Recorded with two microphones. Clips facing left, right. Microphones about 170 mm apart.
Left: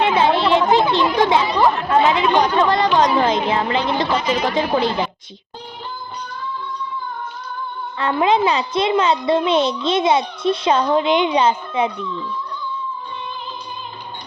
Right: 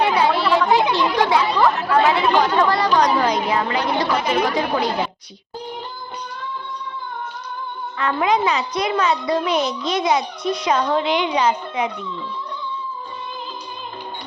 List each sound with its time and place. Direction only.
0.0 s a sound: 20° left (ahead or behind)
0.9 s chatter: 20° left (ahead or behind)
1.9 s a child's voice: 20° left (ahead or behind)
4.2 s a woman's voice: 60° right (ahead or behind)
7.9 s a child's voice: 30° left (ahead or behind)